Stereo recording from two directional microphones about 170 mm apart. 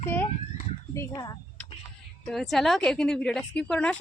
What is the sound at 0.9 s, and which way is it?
Speech, 20° left (ahead or behind).